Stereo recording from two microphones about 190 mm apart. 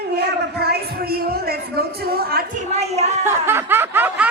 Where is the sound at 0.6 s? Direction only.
55° right (ahead or behind).